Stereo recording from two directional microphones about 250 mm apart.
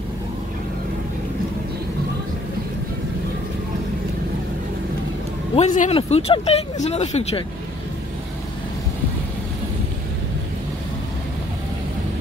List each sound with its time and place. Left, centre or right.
5.6 s speech: left